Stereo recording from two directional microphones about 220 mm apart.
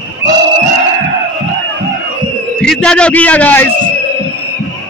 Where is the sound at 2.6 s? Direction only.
5° left (ahead or behind).